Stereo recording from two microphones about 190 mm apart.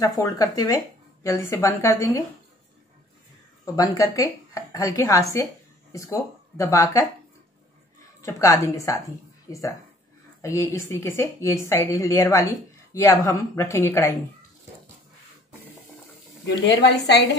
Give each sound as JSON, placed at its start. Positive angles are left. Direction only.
{"t": 0.0, "sound": "a woman's voice", "side_deg": 20}
{"t": 3.6, "sound": "a woman's voice", "side_deg": 20}
{"t": 8.2, "sound": "a woman's voice", "side_deg": 15}
{"t": 16.4, "sound": "a woman's voice", "side_deg": 65}